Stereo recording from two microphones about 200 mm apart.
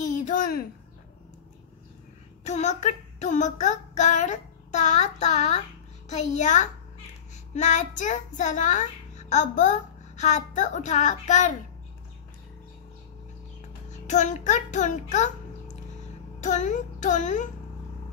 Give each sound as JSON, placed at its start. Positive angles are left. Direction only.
{"t": 0.0, "sound": "a sound", "side_deg": 40}
{"t": 2.4, "sound": "a child's voice", "side_deg": 35}
{"t": 14.0, "sound": "a child's voice", "side_deg": 35}